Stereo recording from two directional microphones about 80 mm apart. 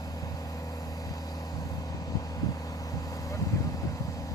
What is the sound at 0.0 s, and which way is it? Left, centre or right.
Vehicle, left.